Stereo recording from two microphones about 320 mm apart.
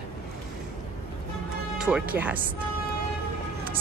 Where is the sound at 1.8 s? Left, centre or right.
Centre.